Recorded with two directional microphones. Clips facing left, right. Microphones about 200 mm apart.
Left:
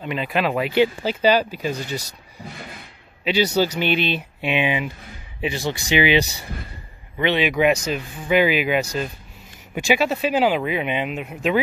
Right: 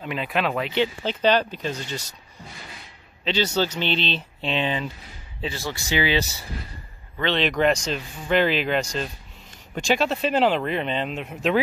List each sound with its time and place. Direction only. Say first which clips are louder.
0.0 s speech: left 3 dB; centre (ahead or behind)
3.5 s speech: left 4 dB; 10° left (ahead or behind)